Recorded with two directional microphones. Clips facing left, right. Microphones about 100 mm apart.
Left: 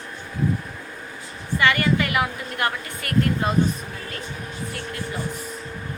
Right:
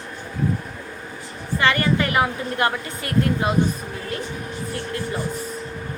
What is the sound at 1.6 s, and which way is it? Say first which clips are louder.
A woman's voice: right 1 dB; 35° right (ahead or behind).